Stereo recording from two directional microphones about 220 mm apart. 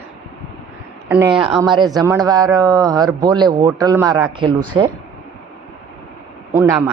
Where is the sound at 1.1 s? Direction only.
5° right (ahead or behind).